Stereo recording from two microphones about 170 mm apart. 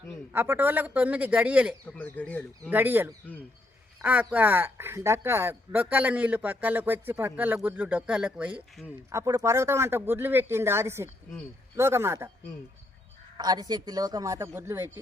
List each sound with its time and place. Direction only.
0.3 s speech: 10° right (ahead or behind)
1.9 s speech: 10° left (ahead or behind)
2.6 s speech: 10° right (ahead or behind)
9.2 s speech: 20° right (ahead or behind)
13.3 s speech: 25° right (ahead or behind)